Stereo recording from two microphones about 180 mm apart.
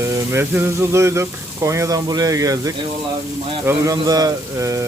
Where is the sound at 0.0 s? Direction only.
15° right (ahead or behind).